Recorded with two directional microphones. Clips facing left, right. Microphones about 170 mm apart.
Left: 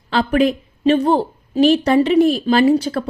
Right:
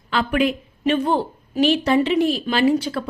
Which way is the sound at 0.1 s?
35° left (ahead or behind).